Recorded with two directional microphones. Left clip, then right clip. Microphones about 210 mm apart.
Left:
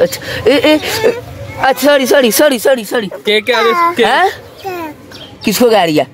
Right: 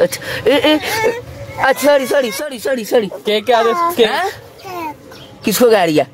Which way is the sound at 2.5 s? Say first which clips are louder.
Left 9 dB; 40° left (ahead or behind).